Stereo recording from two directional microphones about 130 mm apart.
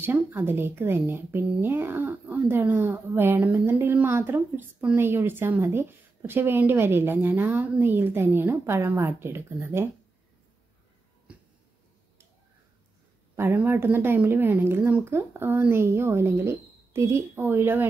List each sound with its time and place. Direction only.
0.0 s speech: 15° right (ahead or behind)
11.3 s a sound: 10° right (ahead or behind)
13.4 s speech: 15° right (ahead or behind)